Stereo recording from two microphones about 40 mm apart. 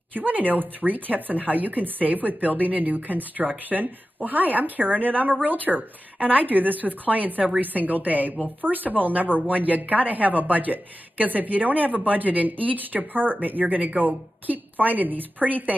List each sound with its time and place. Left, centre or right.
0.1 s a woman's voice: right